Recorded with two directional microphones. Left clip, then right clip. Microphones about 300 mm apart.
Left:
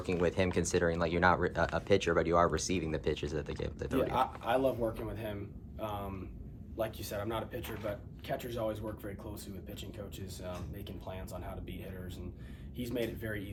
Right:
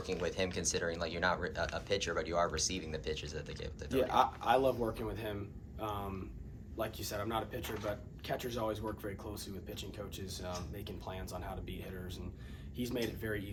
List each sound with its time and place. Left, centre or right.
0.0 s speech: left
4.1 s speech: centre
10.4 s speech: centre